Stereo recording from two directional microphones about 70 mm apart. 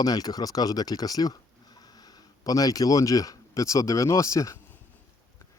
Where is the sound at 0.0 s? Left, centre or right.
Left.